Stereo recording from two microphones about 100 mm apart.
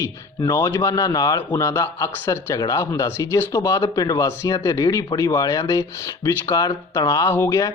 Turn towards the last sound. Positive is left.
turn(degrees=30)  # may be behind; listen again after turning